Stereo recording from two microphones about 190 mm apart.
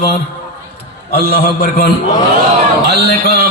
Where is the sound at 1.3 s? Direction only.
55° left (ahead or behind).